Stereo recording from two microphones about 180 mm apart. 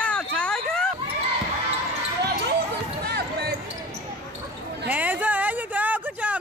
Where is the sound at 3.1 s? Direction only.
60° right (ahead or behind).